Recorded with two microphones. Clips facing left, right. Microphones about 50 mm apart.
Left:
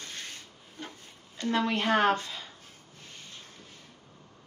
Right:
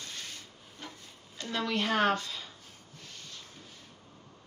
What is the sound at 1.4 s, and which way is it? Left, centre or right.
Speech, left.